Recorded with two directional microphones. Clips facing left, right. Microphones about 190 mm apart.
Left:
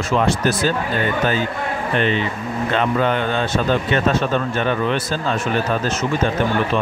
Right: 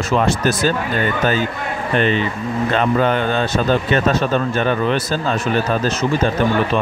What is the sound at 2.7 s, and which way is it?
Speech, 40° right (ahead or behind).